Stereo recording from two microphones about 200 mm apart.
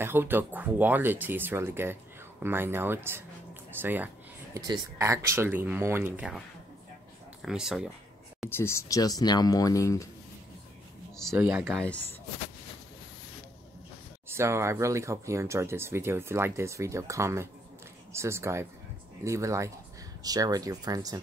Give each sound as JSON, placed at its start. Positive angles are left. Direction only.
{"t": 0.0, "sound": "speech", "side_deg": -10}
{"t": 7.4, "sound": "speech", "side_deg": 0}
{"t": 8.5, "sound": "speech", "side_deg": 10}
{"t": 11.3, "sound": "speech", "side_deg": -10}
{"t": 14.3, "sound": "speech", "side_deg": -15}